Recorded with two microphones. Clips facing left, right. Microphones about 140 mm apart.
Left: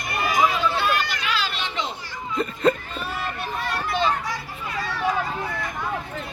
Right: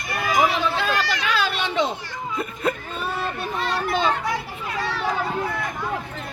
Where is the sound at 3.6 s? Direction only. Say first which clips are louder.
Right 2 dB; 75° right (ahead or behind).